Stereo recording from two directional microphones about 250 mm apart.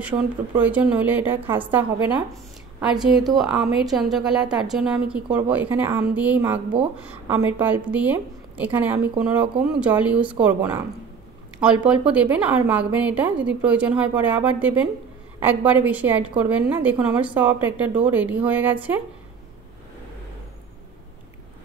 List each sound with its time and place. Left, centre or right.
0.1 s speech: centre
0.6 s a woman's voice: centre